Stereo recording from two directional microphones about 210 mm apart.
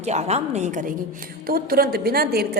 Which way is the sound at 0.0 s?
30° right (ahead or behind).